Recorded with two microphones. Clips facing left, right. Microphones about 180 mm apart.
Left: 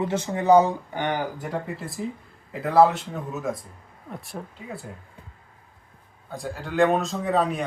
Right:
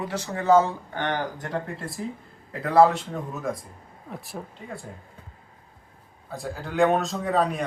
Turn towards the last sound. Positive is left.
turn(degrees=0)  # may be behind; listen again after turning